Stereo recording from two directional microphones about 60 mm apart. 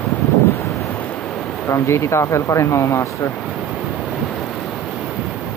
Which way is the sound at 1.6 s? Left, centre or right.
Left.